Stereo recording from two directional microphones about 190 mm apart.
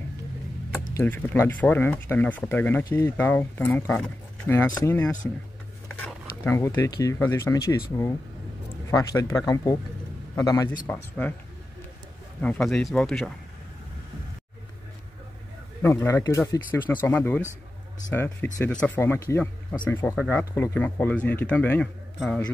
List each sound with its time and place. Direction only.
0.9 s speech: 10° left (ahead or behind)
8.9 s speech: 20° left (ahead or behind)
12.4 s speech: 5° left (ahead or behind)
15.8 s speech: 15° left (ahead or behind)